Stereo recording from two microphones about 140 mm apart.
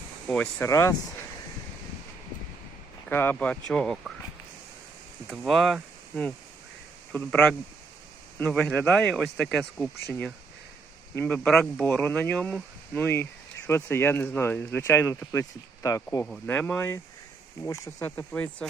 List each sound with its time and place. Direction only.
0.3 s speech: 10° left (ahead or behind)
3.1 s speech: 15° left (ahead or behind)
5.3 s speech: centre (ahead or behind)
7.3 s speech: 5° left (ahead or behind)
11.4 s speech: 5° left (ahead or behind); by 16.0 s 20° left (ahead or behind)
16.2 s speech: 10° left (ahead or behind)
18.3 s speech: 5° left (ahead or behind)